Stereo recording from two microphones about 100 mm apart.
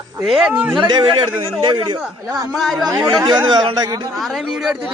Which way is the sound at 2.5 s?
Centre (ahead or behind).